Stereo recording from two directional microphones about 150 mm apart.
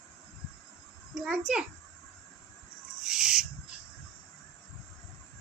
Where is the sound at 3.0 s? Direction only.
5° right (ahead or behind).